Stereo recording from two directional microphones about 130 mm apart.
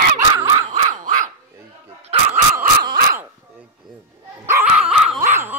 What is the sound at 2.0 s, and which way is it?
Dog, 55° right (ahead or behind).